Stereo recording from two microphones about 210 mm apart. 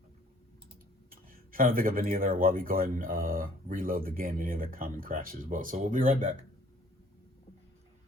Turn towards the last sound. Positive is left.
turn(degrees=-35)  # may be behind; listen again after turning